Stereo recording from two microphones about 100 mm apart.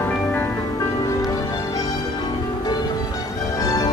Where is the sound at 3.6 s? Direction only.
35° left (ahead or behind).